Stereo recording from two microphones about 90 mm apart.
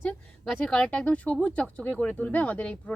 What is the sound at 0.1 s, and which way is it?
Speech, 5° left (ahead or behind).